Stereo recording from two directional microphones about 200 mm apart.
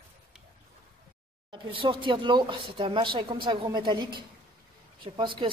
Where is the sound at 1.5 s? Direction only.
25° right (ahead or behind).